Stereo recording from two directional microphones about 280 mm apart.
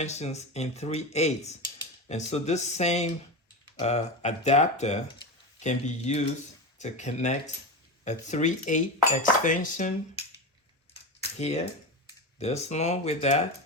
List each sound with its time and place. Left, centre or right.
0.0 s speech: left